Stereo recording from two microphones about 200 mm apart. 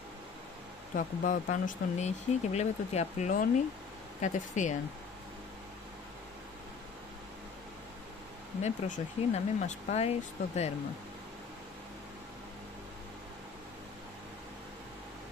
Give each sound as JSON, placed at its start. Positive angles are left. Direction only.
{"t": 0.9, "sound": "speech", "side_deg": 40}
{"t": 8.6, "sound": "speech", "side_deg": 35}